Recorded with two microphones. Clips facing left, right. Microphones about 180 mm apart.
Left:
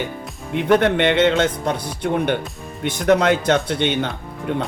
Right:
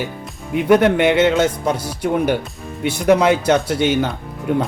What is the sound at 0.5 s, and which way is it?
Speech, 10° right (ahead or behind).